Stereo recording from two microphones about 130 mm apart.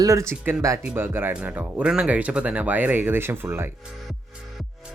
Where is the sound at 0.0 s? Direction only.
25° right (ahead or behind).